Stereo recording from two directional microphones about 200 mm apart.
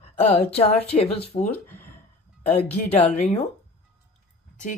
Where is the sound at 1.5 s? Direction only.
10° left (ahead or behind).